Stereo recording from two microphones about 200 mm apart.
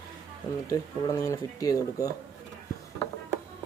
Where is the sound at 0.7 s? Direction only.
15° left (ahead or behind).